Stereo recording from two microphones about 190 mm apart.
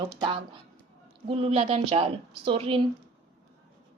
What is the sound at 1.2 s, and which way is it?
A woman's voice, 30° right (ahead or behind).